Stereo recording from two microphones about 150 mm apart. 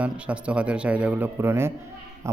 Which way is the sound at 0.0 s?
10° right (ahead or behind).